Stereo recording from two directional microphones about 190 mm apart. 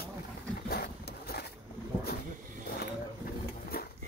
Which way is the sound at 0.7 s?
55° left (ahead or behind).